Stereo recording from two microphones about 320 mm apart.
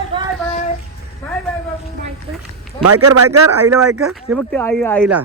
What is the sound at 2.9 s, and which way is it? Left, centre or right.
Speech, right.